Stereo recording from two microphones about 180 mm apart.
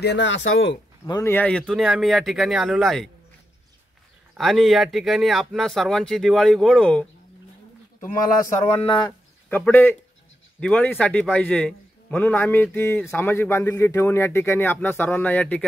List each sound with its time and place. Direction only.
0.0 s speech: 80° left
1.0 s speech: 15° left (ahead or behind); by 3.1 s centre (ahead or behind)
4.4 s speech: centre (ahead or behind)
8.7 s speech: 25° left (ahead or behind)
9.7 s a man's voice: 10° left (ahead or behind)